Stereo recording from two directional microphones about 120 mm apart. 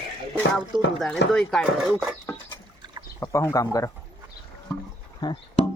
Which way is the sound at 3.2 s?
20° left (ahead or behind).